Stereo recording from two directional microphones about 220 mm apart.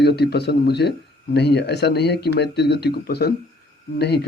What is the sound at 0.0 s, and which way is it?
A man's voice, 50° left (ahead or behind).